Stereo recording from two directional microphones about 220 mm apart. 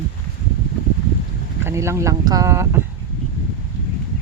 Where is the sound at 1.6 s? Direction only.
10° right (ahead or behind).